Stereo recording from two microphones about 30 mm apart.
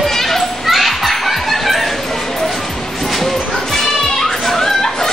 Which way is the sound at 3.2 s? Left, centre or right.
Centre.